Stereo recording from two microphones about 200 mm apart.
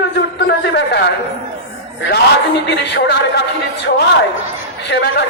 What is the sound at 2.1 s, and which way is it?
A man's voice, 60° left (ahead or behind).